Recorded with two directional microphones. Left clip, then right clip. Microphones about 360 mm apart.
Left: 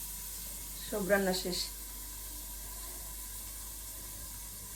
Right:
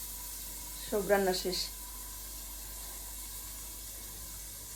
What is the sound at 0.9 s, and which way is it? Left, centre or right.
Speech, centre.